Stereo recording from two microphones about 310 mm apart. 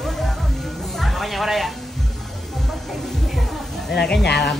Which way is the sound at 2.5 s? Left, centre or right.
Centre.